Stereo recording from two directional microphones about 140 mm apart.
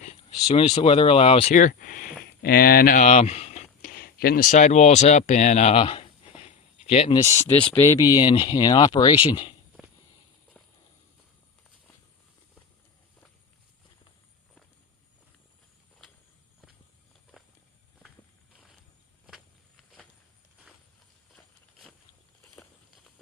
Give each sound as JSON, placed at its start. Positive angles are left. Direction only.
{"t": 0.0, "sound": "speech", "side_deg": 45}
{"t": 1.5, "sound": "speech", "side_deg": 75}
{"t": 3.0, "sound": "a sound", "side_deg": 55}
{"t": 3.8, "sound": "speech", "side_deg": 90}
{"t": 7.1, "sound": "speech", "side_deg": 20}
{"t": 17.3, "sound": "walk", "side_deg": 0}